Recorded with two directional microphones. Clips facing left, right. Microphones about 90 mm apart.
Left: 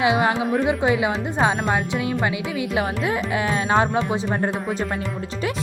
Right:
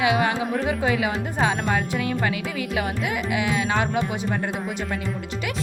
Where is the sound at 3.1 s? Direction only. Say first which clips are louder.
Left 2 dB; 35° left (ahead or behind).